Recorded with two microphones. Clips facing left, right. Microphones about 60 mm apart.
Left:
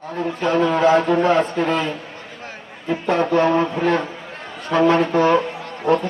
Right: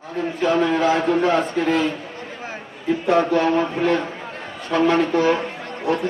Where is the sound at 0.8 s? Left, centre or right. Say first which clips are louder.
Left 3 dB; left.